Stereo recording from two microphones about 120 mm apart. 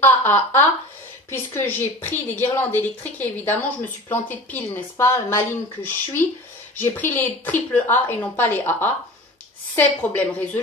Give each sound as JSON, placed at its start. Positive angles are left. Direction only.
{"t": 0.0, "sound": "a woman's voice", "side_deg": 20}